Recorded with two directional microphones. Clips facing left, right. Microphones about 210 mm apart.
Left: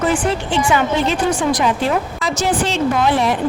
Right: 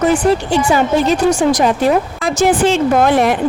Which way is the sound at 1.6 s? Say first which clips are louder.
Right 5 dB; 55° right (ahead or behind).